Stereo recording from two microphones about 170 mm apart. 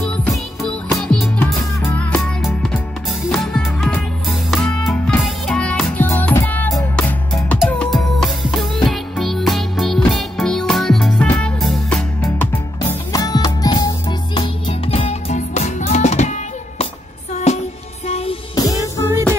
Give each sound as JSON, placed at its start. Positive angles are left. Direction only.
{"t": 0.0, "sound": "music", "side_deg": 5}
{"t": 13.1, "sound": "music", "side_deg": 20}
{"t": 18.5, "sound": "music", "side_deg": 20}